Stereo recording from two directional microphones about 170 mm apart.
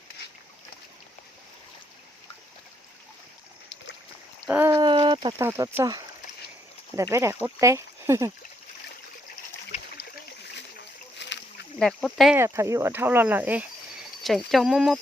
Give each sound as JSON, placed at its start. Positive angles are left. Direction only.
{"t": 4.4, "sound": "a sound", "side_deg": -10}
{"t": 4.7, "sound": "a sound", "side_deg": -25}
{"t": 5.4, "sound": "speech", "side_deg": -15}
{"t": 11.2, "sound": "rowboat", "side_deg": 90}
{"t": 11.8, "sound": "speech", "side_deg": 5}
{"t": 12.4, "sound": "speech", "side_deg": -15}